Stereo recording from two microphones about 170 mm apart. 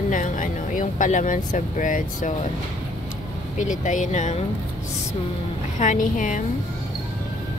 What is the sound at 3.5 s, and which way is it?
Speech, 45° left (ahead or behind).